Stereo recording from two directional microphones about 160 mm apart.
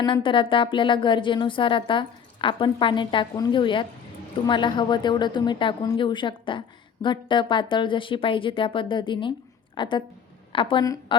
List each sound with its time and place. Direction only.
0.0 s speech: 30° left (ahead or behind)